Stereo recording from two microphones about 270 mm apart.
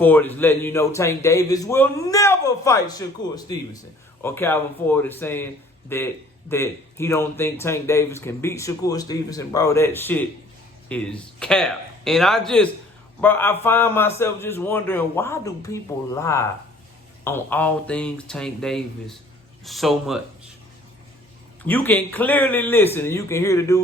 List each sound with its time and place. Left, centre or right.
0.0 s a man's voice: centre
21.6 s speech: centre